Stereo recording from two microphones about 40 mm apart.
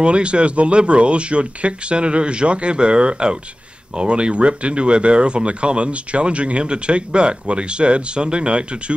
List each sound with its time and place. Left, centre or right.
0.0 s speech: right